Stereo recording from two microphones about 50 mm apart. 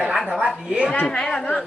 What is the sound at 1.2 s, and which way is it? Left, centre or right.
Speech, centre.